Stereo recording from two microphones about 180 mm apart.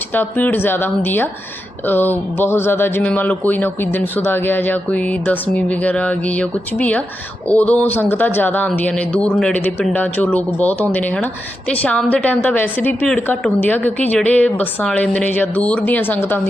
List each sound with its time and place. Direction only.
0.1 s speech: 10° left (ahead or behind)